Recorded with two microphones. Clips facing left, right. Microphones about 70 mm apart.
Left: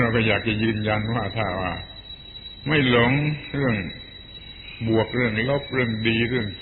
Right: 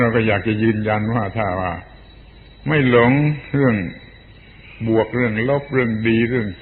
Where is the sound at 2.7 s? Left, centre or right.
Centre.